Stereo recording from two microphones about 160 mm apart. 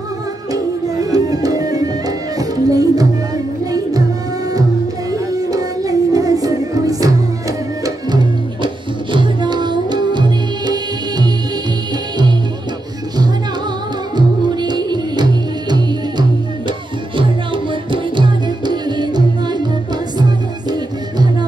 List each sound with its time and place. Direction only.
1.1 s music: 20° right (ahead or behind)
5.1 s music: 20° right (ahead or behind)
9.1 s music: 30° right (ahead or behind)
14.1 s music: 25° right (ahead or behind)
17.9 s music: 30° right (ahead or behind)
20.7 s music: 25° right (ahead or behind)